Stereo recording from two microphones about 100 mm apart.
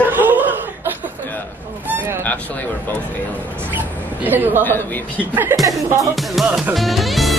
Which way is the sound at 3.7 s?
20° right (ahead or behind).